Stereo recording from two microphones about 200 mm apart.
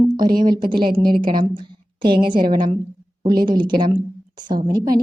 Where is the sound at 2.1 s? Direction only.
25° right (ahead or behind).